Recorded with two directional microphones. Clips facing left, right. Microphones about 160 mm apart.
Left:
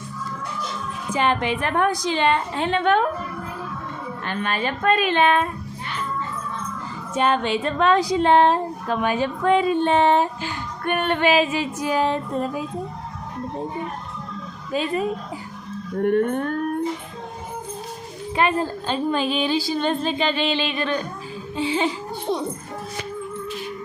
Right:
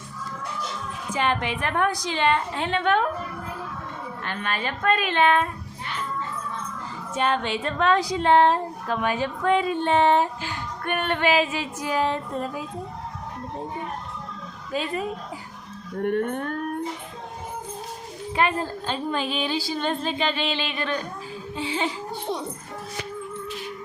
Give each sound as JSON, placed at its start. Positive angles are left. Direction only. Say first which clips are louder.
{"t": 1.1, "sound": "speech", "louder": "left 4 dB", "side_deg": 30}
{"t": 4.3, "sound": "speech", "louder": "left 4 dB", "side_deg": 25}
{"t": 7.2, "sound": "speech", "louder": "left 4 dB", "side_deg": 15}
{"t": 14.7, "sound": "speech", "louder": "left 4 dB", "side_deg": 25}
{"t": 18.3, "sound": "speech", "louder": "left 3 dB", "side_deg": 20}
{"t": 21.5, "sound": "music", "louder": "left 5 dB", "side_deg": 20}